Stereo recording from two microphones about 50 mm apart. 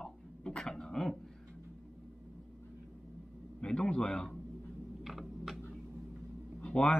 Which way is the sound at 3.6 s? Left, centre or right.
Centre.